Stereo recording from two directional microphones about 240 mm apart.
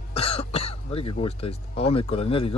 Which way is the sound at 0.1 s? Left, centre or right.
Left.